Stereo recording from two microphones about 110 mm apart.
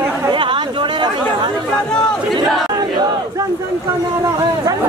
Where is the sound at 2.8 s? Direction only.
40° right (ahead or behind).